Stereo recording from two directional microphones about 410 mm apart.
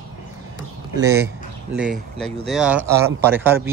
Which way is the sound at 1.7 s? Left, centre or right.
Centre.